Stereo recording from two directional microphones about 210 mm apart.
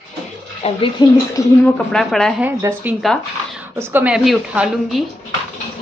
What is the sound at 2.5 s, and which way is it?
A woman's voice, 10° right (ahead or behind).